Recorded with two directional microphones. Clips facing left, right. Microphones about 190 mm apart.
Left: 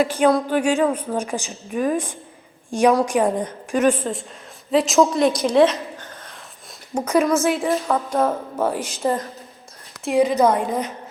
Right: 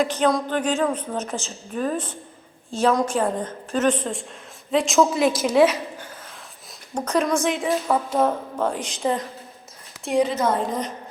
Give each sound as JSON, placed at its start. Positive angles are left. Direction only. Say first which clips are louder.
{"t": 0.0, "sound": "a woman's voice", "louder": "left 3 dB", "side_deg": 5}
{"t": 6.9, "sound": "a woman's voice", "louder": "left 4 dB", "side_deg": 10}
{"t": 8.5, "sound": "a woman's voice", "louder": "left 2 dB", "side_deg": 5}
{"t": 10.3, "sound": "a woman's voice", "louder": "left 5 dB", "side_deg": 10}